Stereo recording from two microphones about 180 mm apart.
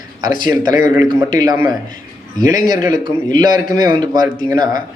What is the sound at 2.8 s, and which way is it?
A man's voice, 20° right (ahead or behind).